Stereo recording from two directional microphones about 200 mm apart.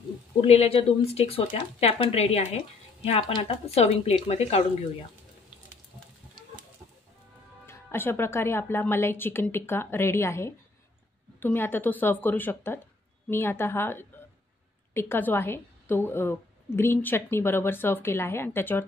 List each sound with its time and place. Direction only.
0.4 s speech: 30° left (ahead or behind)
7.6 s a woman's voice: 10° left (ahead or behind)